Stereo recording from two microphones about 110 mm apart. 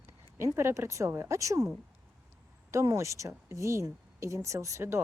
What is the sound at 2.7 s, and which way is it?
Speech, 30° right (ahead or behind).